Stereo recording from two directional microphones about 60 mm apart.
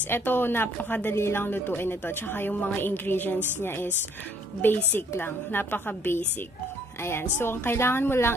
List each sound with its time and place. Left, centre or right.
0.0 s speech: left
1.1 s speech: left
4.6 s speech: left